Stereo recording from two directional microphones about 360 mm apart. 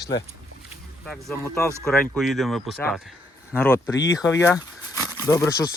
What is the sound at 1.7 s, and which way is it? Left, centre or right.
Speech, centre.